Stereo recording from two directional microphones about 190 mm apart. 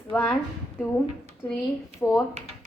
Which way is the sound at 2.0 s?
15° left (ahead or behind).